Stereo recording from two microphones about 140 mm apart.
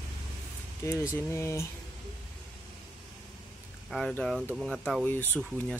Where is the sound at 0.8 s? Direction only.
20° left (ahead or behind).